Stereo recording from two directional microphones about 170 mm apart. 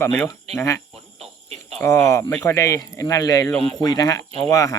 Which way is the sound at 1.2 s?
40° right (ahead or behind).